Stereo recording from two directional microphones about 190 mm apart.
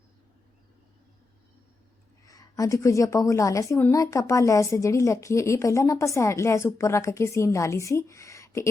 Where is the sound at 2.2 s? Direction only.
20° left (ahead or behind).